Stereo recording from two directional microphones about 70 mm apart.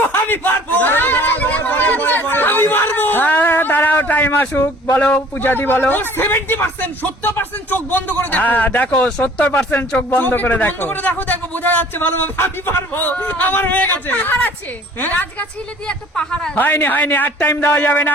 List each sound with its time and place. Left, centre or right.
0.1 s a sound: left
5.1 s a man's voice: left
9.0 s a woman's voice: centre
9.2 s a man's voice: left
15.9 s a woman's voice: centre
16.6 s a man's voice: left